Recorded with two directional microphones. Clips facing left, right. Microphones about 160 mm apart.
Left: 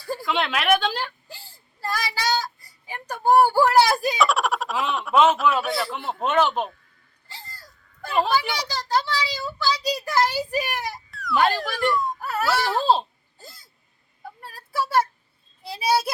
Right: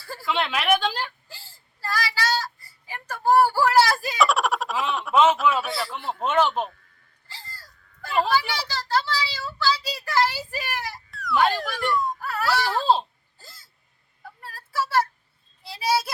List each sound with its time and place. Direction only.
0.0 s a sound: 15° left (ahead or behind)
0.3 s a woman's voice: centre (ahead or behind)
1.3 s whimper: 20° left (ahead or behind)
4.2 s a woman's voice: centre (ahead or behind)
7.3 s whimper: 20° left (ahead or behind)
8.2 s a child's voice: 15° left (ahead or behind)
11.1 s speech: centre (ahead or behind)
12.2 s baby cry: 25° left (ahead or behind)
12.5 s a woman's voice: centre (ahead or behind)
13.4 s hiccup: 20° left (ahead or behind)
14.3 s a sound: 15° left (ahead or behind)
15.7 s a child's voice: 20° left (ahead or behind)